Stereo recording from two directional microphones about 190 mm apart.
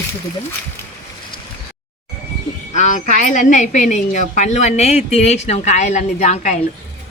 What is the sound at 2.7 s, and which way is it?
A woman's voice, 40° left (ahead or behind).